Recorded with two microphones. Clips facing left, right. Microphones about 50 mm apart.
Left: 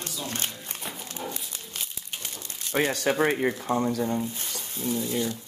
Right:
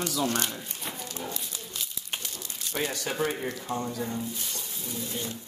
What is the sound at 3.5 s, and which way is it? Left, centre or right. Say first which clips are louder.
Speech: left 6 dB; left.